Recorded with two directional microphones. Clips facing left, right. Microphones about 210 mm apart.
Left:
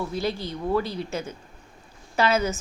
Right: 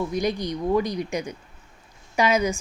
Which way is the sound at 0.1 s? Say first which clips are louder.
Right 3 dB; 15° right (ahead or behind).